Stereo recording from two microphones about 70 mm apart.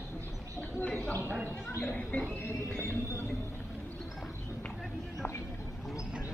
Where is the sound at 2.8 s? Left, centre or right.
Left.